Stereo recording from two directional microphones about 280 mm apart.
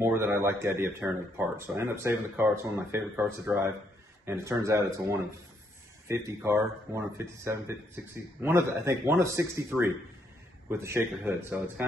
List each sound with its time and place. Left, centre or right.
0.0 s speech: centre